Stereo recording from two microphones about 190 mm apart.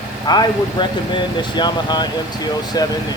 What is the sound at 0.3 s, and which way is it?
Speech, 25° left (ahead or behind).